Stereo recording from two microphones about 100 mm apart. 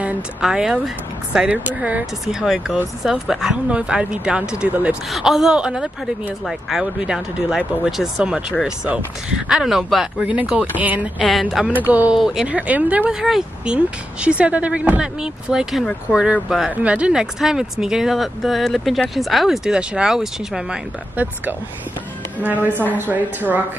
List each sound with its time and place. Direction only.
0.0 s speech: 5° right (ahead or behind)
2.2 s speech: 5° right (ahead or behind)
10.2 s speech: 10° right (ahead or behind)
11.2 s speech: centre (ahead or behind)
11.7 s speech: 20° right (ahead or behind)
12.2 s speech: 5° right (ahead or behind)
22.4 s speech: 15° right (ahead or behind)